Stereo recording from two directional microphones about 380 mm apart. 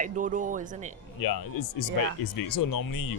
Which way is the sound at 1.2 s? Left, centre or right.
Left.